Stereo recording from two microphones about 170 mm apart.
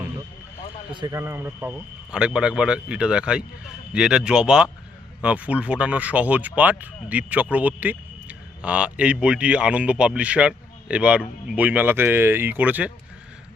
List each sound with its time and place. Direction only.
0.9 s speech: 25° right (ahead or behind)
1.2 s a man's voice: 10° right (ahead or behind)